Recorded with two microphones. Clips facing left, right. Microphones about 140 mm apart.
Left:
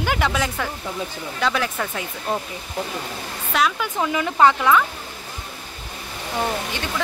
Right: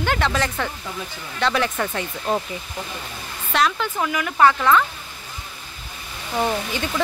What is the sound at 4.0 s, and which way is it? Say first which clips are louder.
Speech: left 1 dB; 25° left (ahead or behind).